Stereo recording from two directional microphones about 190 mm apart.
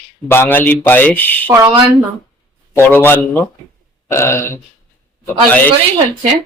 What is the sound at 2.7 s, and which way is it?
Speech, 10° left (ahead or behind).